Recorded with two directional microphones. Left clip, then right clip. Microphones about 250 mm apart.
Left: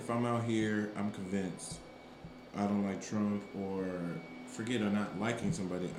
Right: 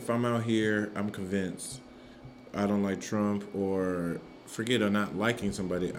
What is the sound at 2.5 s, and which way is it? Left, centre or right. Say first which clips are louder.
Speech: right 6 dB; right.